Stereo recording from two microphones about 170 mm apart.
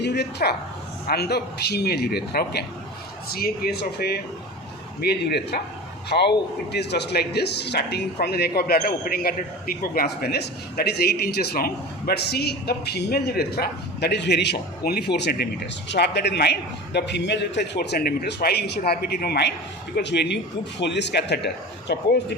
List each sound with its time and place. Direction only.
0.0 s a man's voice: 80° left
20.0 s a man's voice: 90° left